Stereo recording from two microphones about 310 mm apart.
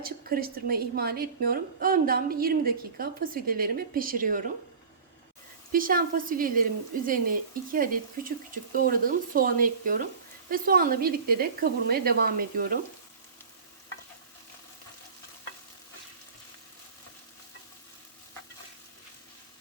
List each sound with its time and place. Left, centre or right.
0.0 s a woman's voice: right
5.7 s a woman's voice: right